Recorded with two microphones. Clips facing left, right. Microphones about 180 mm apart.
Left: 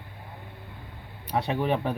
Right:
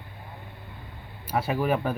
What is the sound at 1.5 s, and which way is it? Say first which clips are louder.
Speech: right 1 dB; 30° left (ahead or behind).